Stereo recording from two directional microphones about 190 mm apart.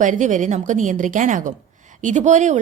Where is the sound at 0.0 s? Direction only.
40° right (ahead or behind).